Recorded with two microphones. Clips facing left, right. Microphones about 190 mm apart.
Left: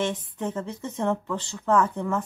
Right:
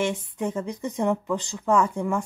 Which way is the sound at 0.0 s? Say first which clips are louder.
Right 2 dB; 10° right (ahead or behind).